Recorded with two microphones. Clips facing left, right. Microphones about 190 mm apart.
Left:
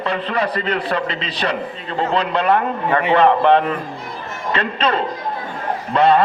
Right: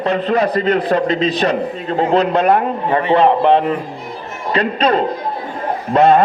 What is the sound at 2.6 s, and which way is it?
A man's voice, 25° right (ahead or behind).